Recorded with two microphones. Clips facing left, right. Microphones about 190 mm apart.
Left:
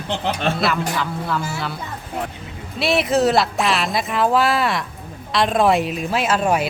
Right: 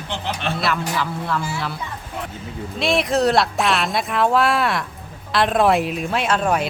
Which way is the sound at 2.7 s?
5° left (ahead or behind).